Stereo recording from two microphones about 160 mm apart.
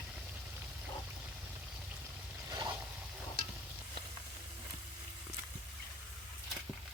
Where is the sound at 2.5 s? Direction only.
25° right (ahead or behind).